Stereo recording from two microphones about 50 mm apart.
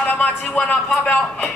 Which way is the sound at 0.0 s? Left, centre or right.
Left.